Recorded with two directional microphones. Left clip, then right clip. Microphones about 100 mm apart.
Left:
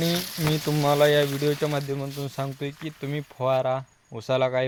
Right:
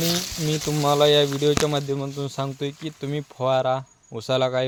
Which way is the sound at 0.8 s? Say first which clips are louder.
Right 1 dB; 40° right (ahead or behind).